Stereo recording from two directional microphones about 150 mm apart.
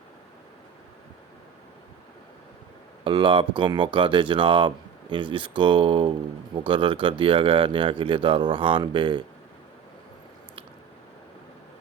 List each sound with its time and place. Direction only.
3.0 s speech: 35° right (ahead or behind)